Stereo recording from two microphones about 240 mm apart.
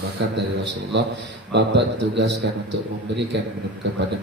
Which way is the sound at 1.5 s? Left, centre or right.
Right.